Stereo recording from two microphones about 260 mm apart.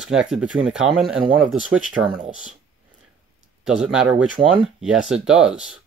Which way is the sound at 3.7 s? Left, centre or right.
Centre.